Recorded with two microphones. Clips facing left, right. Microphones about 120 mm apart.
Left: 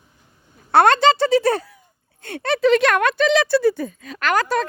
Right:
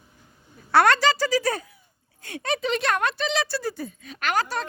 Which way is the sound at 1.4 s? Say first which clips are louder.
Left 7 dB; 65° left (ahead or behind).